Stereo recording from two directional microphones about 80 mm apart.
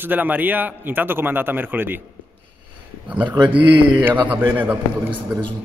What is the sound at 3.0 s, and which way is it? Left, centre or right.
Speech, centre.